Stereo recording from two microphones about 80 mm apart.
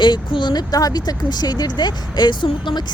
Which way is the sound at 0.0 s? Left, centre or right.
Left.